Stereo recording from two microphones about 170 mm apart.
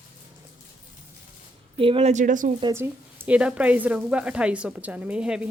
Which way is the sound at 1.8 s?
35° right (ahead or behind).